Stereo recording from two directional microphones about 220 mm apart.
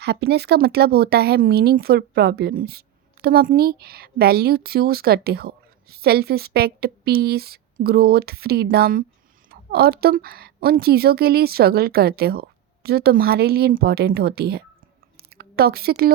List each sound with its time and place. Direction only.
0.0 s a woman's voice: 50° right (ahead or behind)